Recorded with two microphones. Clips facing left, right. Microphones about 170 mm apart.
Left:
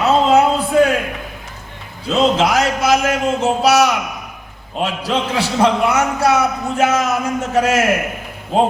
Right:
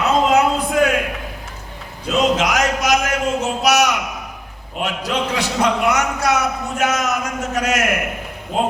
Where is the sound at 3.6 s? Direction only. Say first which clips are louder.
Left 2 dB; 30° left (ahead or behind).